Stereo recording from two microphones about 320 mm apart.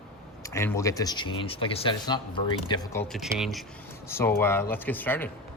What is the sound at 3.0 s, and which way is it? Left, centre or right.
A man's voice, centre.